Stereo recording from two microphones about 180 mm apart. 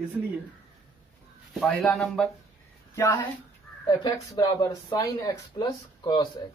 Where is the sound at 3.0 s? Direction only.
15° left (ahead or behind).